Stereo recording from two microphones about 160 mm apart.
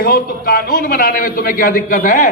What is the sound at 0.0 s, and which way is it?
A man's voice, 70° left (ahead or behind).